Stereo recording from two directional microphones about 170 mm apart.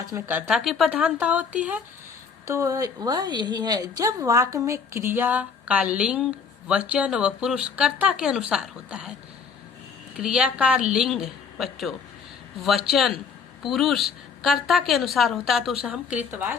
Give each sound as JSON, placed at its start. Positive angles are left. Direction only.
{"t": 0.1, "sound": "a woman's voice", "side_deg": -10}
{"t": 10.2, "sound": "a woman's voice", "side_deg": -5}